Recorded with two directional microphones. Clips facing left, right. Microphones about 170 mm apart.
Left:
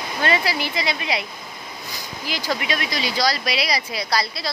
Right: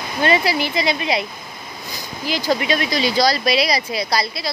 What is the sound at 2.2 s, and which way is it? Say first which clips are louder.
Speech: right 6 dB; 25° right (ahead or behind).